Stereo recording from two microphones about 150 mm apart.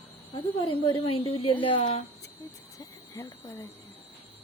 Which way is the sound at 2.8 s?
25° left (ahead or behind).